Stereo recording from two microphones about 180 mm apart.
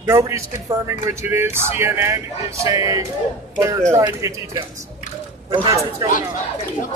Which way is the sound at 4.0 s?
20° right (ahead or behind).